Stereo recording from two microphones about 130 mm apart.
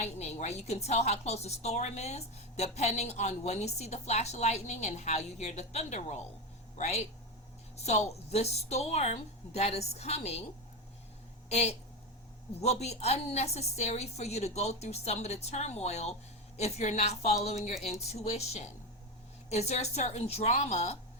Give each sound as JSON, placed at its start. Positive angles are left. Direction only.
{"t": 0.0, "sound": "a woman's voice", "side_deg": 60}
{"t": 8.3, "sound": "a woman's voice", "side_deg": 55}
{"t": 11.4, "sound": "a woman's voice", "side_deg": 55}